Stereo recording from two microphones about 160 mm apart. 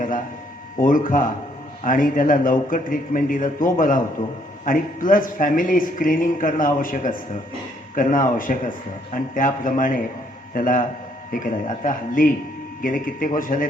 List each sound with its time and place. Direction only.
0.8 s speech: 55° left (ahead or behind)